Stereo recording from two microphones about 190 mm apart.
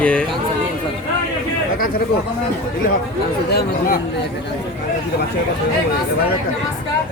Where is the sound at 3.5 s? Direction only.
55° left (ahead or behind).